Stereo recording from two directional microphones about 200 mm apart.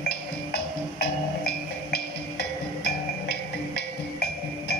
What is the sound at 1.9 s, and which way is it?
Music, 55° left (ahead or behind).